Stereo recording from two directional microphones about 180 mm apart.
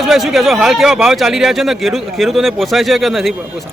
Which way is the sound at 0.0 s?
Centre (ahead or behind).